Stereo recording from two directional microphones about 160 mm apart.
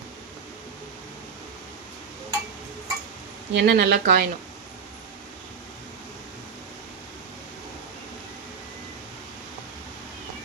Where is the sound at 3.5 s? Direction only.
90° right.